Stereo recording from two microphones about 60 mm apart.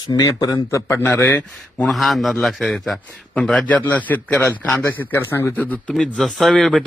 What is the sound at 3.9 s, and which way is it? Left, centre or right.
A man's voice, left.